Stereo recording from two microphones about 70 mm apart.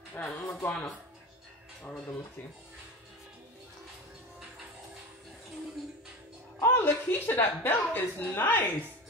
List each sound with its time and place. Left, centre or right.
0.2 s speech: centre
0.5 s speech: left
1.8 s speech: centre
6.6 s a woman's voice: left